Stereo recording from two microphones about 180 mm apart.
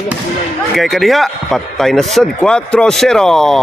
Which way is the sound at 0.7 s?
Centre (ahead or behind).